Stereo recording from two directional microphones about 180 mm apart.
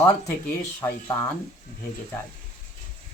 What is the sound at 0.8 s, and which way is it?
Speech, 20° left (ahead or behind).